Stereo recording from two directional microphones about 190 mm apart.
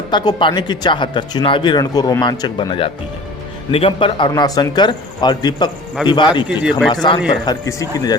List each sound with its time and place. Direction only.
0.1 s speech: 25° left (ahead or behind)
6.6 s speech: 5° right (ahead or behind)
6.9 s speech: 25° left (ahead or behind)